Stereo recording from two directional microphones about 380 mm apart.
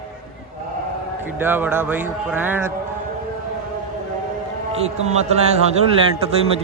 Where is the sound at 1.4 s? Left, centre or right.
Centre.